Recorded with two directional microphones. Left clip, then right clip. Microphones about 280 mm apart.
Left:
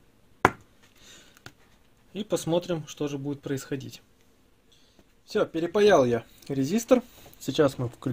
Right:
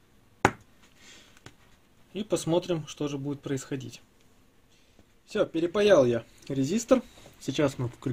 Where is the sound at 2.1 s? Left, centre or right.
Centre.